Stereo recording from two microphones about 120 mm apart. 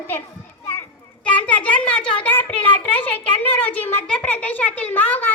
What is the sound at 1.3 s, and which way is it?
A child's voice, 10° left (ahead or behind).